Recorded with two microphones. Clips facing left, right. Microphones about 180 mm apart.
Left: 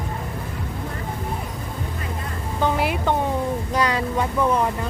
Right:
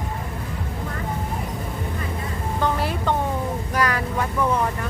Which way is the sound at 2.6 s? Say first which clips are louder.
Left 2 dB; 15° left (ahead or behind).